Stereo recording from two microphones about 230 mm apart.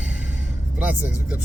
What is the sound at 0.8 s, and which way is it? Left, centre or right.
Speech, centre.